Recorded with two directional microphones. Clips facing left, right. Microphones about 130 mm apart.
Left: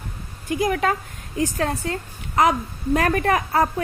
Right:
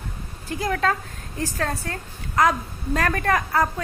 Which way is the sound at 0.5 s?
15° left (ahead or behind).